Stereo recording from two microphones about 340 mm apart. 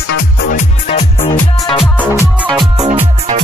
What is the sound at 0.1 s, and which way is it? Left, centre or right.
Music, left.